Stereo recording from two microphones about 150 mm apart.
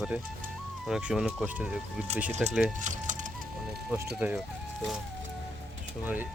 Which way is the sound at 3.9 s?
10° right (ahead or behind).